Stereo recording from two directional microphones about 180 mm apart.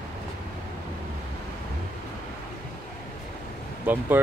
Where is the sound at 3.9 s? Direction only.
10° right (ahead or behind).